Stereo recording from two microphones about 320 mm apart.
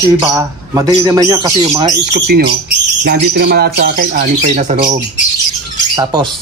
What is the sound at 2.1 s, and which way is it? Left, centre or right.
Speech, right.